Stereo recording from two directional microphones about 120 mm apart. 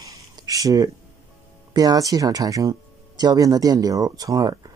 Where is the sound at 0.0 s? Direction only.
30° right (ahead or behind).